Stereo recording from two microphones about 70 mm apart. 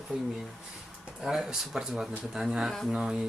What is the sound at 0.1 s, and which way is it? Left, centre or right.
Speech, centre.